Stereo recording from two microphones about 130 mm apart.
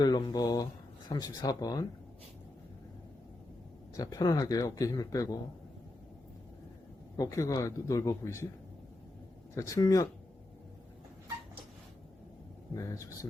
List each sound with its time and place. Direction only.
0.0 s speech: 30° left (ahead or behind)
3.9 s speech: 25° left (ahead or behind)
7.2 s speech: 25° left (ahead or behind)
9.6 s speech: 25° left (ahead or behind)
12.7 s speech: 25° left (ahead or behind)